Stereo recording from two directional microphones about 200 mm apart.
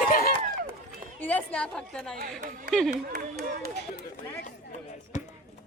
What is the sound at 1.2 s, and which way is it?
Chatter, 10° left (ahead or behind).